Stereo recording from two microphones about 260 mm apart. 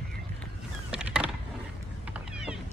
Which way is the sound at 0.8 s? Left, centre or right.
Centre.